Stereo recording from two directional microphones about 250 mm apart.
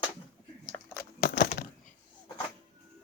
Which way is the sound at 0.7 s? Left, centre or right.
Centre.